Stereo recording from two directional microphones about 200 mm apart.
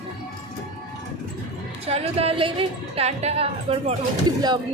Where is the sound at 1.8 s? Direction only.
30° right (ahead or behind).